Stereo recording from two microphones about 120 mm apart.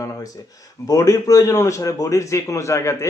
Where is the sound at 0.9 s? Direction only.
30° left (ahead or behind).